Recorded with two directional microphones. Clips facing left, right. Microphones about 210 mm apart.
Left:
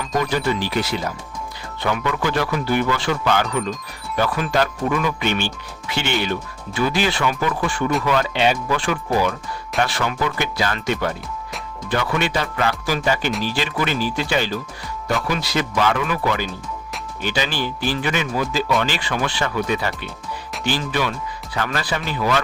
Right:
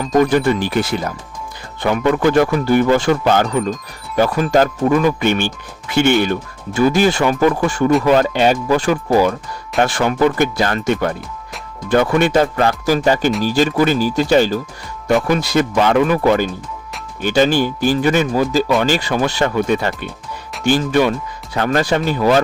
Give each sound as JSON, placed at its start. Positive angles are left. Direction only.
{"t": 0.0, "sound": "speech", "side_deg": -50}